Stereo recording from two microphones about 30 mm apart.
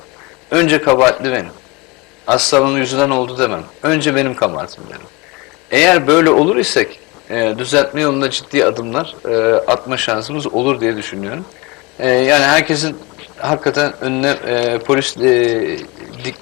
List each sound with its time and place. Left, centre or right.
0.5 s a man's voice: centre
1.1 s a man's voice: centre